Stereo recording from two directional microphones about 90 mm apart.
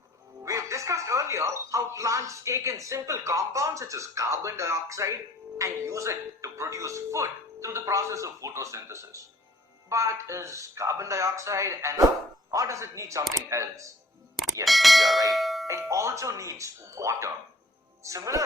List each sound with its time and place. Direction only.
0.4 s speech: 35° right (ahead or behind)
14.6 s speech: centre (ahead or behind)
15.3 s bell: centre (ahead or behind)
15.9 s speech: 35° right (ahead or behind)